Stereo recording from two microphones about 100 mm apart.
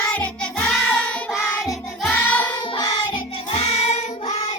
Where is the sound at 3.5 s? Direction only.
90° left.